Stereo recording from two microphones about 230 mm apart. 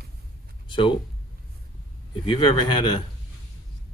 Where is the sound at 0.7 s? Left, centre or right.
Left.